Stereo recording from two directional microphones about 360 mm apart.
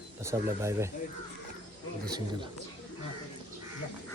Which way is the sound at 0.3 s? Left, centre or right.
Centre.